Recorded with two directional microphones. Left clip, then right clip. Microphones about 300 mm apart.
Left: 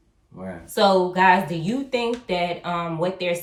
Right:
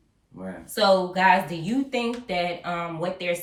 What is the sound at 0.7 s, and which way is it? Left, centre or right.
Speech, centre.